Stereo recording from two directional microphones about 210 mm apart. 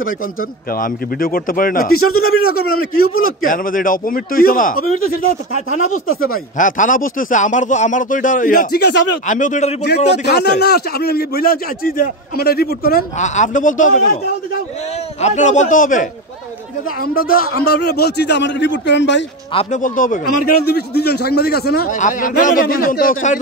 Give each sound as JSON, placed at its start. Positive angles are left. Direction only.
{"t": 0.7, "sound": "a man's voice", "side_deg": 40}
{"t": 2.0, "sound": "a man's voice", "side_deg": 90}
{"t": 3.4, "sound": "speech", "side_deg": 40}
{"t": 5.7, "sound": "speech", "side_deg": 80}
{"t": 6.2, "sound": "speech", "side_deg": 40}
{"t": 9.8, "sound": "a man's voice", "side_deg": 50}
{"t": 15.2, "sound": "a man's voice", "side_deg": 35}
{"t": 19.5, "sound": "a man's voice", "side_deg": 35}